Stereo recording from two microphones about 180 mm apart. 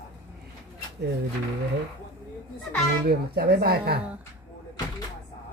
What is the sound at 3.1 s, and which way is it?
Speech, 60° right (ahead or behind).